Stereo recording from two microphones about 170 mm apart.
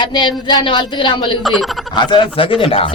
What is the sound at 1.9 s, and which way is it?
Speech, 30° left (ahead or behind).